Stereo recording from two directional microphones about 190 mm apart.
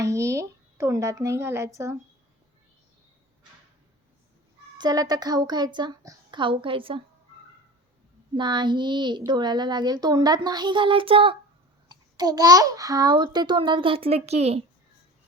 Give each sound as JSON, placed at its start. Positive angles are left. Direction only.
{"t": 0.0, "sound": "a woman's voice", "side_deg": -15}
{"t": 4.8, "sound": "a child's voice", "side_deg": -20}
{"t": 8.4, "sound": "a child's voice", "side_deg": -25}